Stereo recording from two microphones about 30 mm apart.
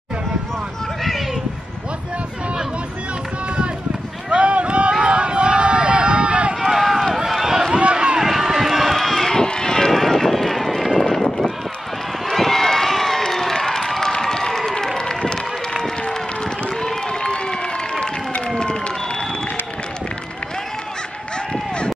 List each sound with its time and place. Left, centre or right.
4.3 s a sound: right
5.0 s run: right
6.6 s run: centre
7.7 s run: right
8.2 s run: centre
8.9 s run: centre
9.3 s run: left
9.9 s run: centre
13.2 s applause: centre
15.0 s run: left
16.0 s a sound: left